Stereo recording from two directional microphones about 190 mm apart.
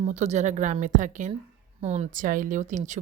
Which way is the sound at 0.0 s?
35° right (ahead or behind).